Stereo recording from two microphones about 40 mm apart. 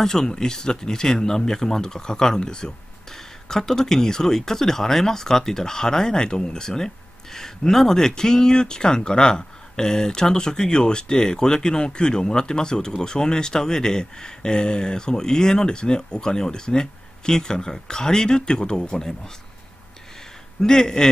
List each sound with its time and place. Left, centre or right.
0.0 s speech: centre
20.6 s speech: centre